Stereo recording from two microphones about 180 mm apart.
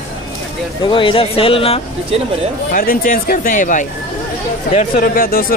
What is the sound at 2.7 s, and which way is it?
Speech, 50° left (ahead or behind).